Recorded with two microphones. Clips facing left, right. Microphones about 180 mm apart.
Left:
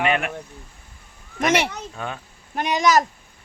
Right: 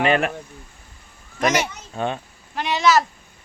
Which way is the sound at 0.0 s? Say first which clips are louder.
Right 3 dB; 35° right (ahead or behind).